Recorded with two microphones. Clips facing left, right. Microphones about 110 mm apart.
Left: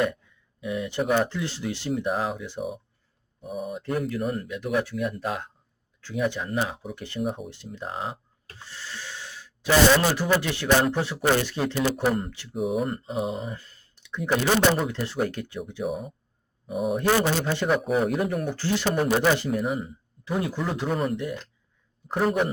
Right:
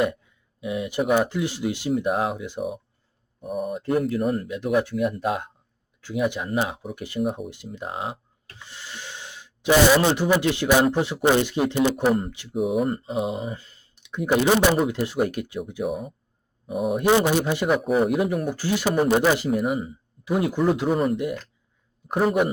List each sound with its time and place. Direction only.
0.7 s speech: 15° right (ahead or behind)
2.6 s speech: centre (ahead or behind)
4.4 s speech: 20° right (ahead or behind)
7.2 s speech: centre (ahead or behind)
7.8 s speech: 15° right (ahead or behind)
12.0 s speech: 5° right (ahead or behind)
13.6 s speech: 15° right (ahead or behind)
15.8 s speech: centre (ahead or behind)
17.0 s speech: 15° right (ahead or behind)
20.2 s speech: 15° right (ahead or behind)
22.2 s speech: 5° right (ahead or behind)